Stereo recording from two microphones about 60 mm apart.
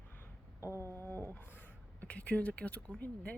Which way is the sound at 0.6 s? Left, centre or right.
Left.